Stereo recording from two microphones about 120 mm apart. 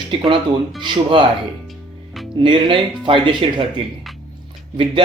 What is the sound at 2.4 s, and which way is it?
Speech, 40° right (ahead or behind).